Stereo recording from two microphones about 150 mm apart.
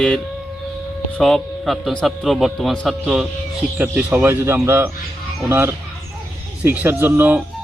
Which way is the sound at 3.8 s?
10° right (ahead or behind).